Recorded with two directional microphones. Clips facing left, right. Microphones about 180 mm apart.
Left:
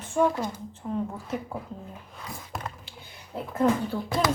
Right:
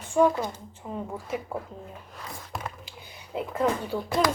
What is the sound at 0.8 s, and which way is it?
Speech, 5° right (ahead or behind).